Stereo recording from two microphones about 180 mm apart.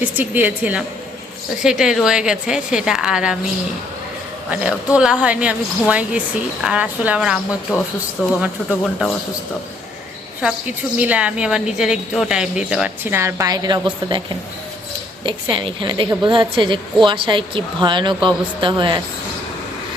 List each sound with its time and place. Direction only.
0.0 s a woman's voice: 10° right (ahead or behind)
4.5 s a woman's voice: 5° right (ahead or behind)
10.9 s a woman's voice: 5° right (ahead or behind); by 14.2 s 25° right (ahead or behind)
15.2 s a woman's voice: 25° right (ahead or behind)